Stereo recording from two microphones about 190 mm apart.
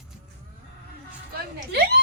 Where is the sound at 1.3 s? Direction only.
55° right (ahead or behind).